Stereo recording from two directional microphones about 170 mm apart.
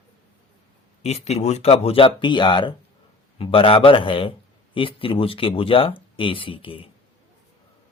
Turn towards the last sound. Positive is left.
turn(degrees=30)  # may be behind; listen again after turning